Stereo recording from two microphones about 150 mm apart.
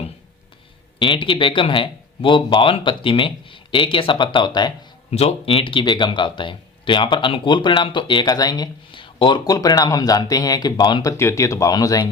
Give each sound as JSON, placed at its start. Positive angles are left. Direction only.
{"t": 0.9, "sound": "speech", "side_deg": 35}
{"t": 5.1, "sound": "speech", "side_deg": 40}
{"t": 11.2, "sound": "speech", "side_deg": 20}